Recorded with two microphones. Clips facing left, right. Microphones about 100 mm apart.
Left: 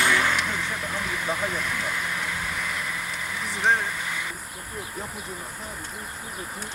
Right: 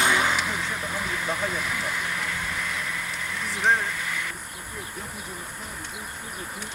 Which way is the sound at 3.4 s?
Centre (ahead or behind).